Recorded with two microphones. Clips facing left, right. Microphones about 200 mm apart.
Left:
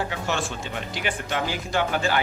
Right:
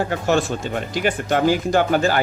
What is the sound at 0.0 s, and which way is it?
Speech, 45° right (ahead or behind).